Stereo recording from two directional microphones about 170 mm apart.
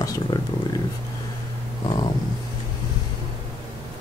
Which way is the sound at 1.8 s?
30° left (ahead or behind).